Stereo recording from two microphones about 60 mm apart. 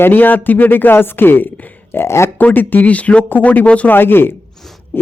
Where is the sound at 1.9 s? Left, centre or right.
Left.